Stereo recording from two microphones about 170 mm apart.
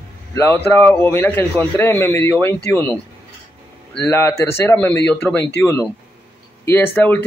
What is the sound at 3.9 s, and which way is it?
A man's voice, 10° left (ahead or behind).